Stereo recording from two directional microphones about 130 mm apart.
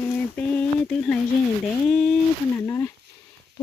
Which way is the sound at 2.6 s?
20° left (ahead or behind).